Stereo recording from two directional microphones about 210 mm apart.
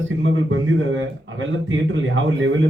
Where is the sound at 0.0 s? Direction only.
65° right (ahead or behind).